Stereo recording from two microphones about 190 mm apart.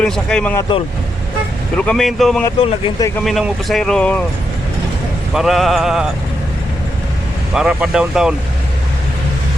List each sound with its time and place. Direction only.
0.0 s speech: 5° left (ahead or behind)
1.7 s speech: 5° left (ahead or behind)
2.6 s speech: 30° left (ahead or behind)
3.2 s speech: centre (ahead or behind)
5.3 s speech: centre (ahead or behind)
7.5 s speech: 5° right (ahead or behind)